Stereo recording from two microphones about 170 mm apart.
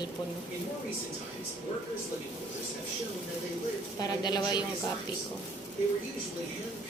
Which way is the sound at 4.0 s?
25° left (ahead or behind).